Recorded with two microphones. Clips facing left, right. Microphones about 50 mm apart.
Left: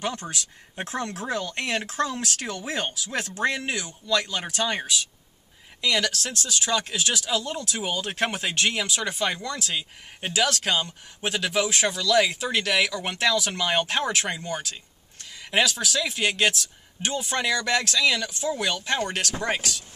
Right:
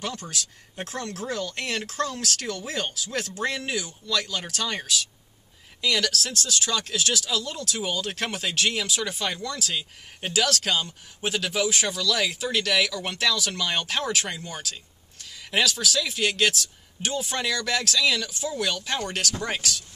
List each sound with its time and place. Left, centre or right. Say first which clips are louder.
0.0 s speech: left 2 dB; centre
3.3 s speech: left 3 dB; centre
4.2 s speech: left 2 dB; centre
18.5 s speech: left 3 dB; centre